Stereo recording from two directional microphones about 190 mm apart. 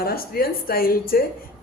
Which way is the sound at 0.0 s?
50° left (ahead or behind).